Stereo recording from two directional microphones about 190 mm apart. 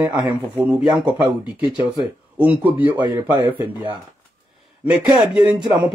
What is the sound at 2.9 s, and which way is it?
Speech, 25° right (ahead or behind).